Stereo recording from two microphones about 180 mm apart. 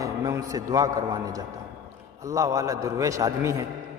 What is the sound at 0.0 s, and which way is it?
A man's voice, 20° right (ahead or behind).